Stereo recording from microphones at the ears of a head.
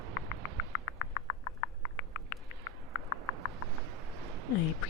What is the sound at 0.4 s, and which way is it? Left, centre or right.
Frog, left.